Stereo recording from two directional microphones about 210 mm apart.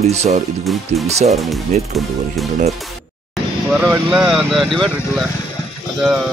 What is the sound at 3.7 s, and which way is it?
Speech, 5° right (ahead or behind).